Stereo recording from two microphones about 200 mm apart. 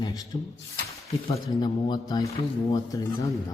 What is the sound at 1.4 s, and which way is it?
A man's voice, 20° left (ahead or behind).